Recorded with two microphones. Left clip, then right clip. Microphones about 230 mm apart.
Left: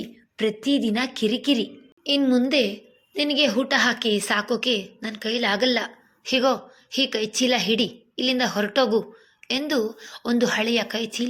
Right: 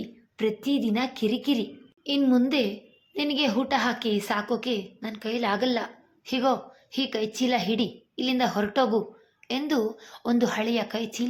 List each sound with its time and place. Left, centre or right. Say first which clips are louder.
0.0 s a woman's voice: left 3 dB; centre